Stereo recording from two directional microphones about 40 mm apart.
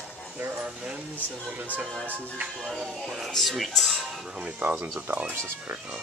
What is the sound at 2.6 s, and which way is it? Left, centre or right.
Speech, centre.